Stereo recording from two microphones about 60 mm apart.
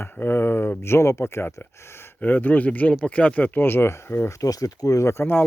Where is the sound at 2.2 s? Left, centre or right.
Left.